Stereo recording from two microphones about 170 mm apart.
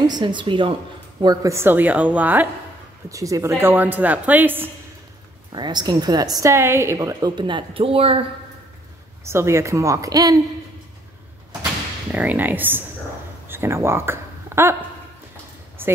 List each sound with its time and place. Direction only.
0.0 s a woman's voice: 25° right (ahead or behind); by 4.6 s 10° right (ahead or behind)
5.5 s a woman's voice: 25° right (ahead or behind)
9.2 s a woman's voice: 15° right (ahead or behind)
12.1 s a woman's voice: 10° right (ahead or behind)
15.8 s a sound: 15° right (ahead or behind)